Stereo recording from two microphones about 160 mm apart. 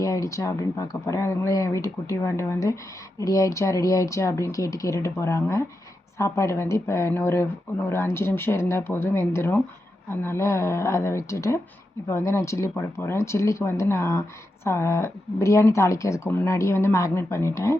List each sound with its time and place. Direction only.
0.0 s speech: 20° left (ahead or behind)